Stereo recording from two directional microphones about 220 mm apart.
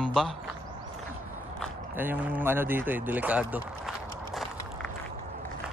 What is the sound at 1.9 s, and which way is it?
Speech, 10° right (ahead or behind).